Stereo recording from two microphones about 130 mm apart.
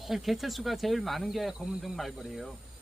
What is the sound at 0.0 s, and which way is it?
Speech, centre (ahead or behind).